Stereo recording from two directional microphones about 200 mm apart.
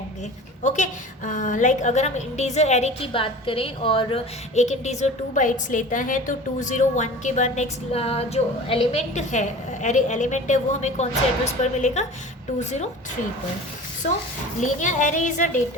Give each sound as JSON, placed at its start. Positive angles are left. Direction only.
{"t": 0.6, "sound": "a woman's voice", "side_deg": 35}
{"t": 14.0, "sound": "a woman's voice", "side_deg": 35}